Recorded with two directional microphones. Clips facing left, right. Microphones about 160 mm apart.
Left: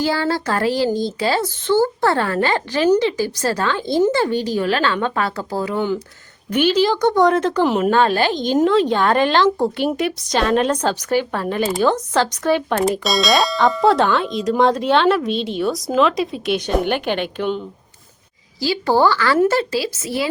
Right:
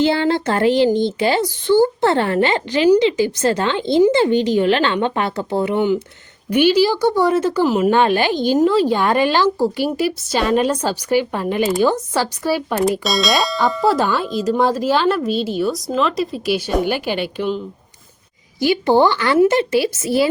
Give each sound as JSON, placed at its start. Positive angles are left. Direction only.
{"t": 0.0, "sound": "a woman's voice", "side_deg": -25}
{"t": 7.9, "sound": "a woman's voice", "side_deg": -15}
{"t": 18.6, "sound": "speech", "side_deg": -20}